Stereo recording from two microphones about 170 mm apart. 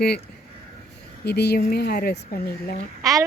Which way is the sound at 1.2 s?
75° left (ahead or behind).